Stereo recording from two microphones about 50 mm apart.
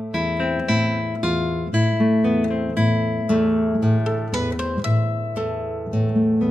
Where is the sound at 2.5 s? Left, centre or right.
Right.